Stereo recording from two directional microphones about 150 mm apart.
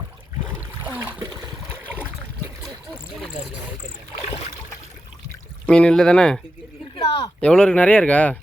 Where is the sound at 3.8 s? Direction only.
50° left (ahead or behind).